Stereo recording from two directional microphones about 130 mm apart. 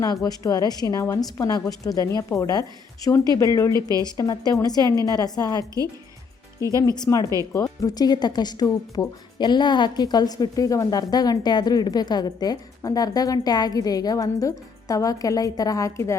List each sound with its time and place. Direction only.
0.0 s speech: 30° left (ahead or behind)
3.7 s a woman's voice: 30° right (ahead or behind)
4.0 s speech: 30° left (ahead or behind)
6.8 s speech: 30° left (ahead or behind)